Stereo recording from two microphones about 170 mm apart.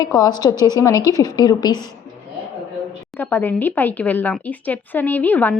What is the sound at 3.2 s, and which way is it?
Speech, 10° left (ahead or behind).